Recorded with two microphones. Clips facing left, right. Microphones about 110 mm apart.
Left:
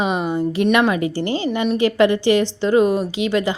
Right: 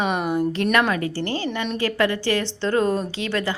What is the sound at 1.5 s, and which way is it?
Speech, 5° left (ahead or behind).